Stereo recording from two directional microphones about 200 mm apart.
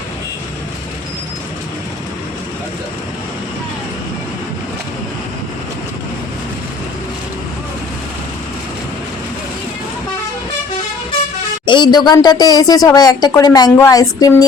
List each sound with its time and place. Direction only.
11.6 s speech: 25° left (ahead or behind)